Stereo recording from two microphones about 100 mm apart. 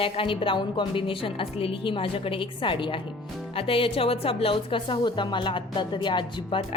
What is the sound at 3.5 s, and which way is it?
A woman's voice, 70° left (ahead or behind).